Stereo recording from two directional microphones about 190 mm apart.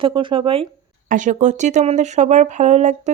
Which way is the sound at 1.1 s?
40° right (ahead or behind).